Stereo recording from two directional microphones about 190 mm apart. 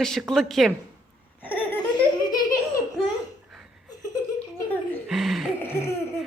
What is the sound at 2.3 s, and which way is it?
Laughter, 20° left (ahead or behind).